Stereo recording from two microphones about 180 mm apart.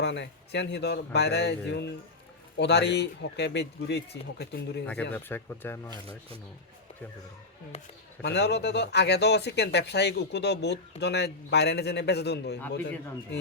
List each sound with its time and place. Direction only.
0.0 s speech: 75° left (ahead or behind)
5.1 s speech: 10° left (ahead or behind)
8.2 s speech: 70° left (ahead or behind)